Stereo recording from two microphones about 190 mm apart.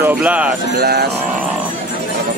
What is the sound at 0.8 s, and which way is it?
Speech, 55° right (ahead or behind).